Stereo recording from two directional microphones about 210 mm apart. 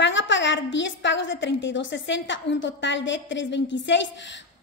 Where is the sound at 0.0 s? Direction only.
60° left (ahead or behind).